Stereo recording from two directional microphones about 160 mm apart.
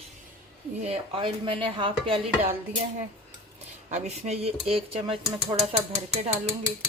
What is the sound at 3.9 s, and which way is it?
Speech, 45° right (ahead or behind).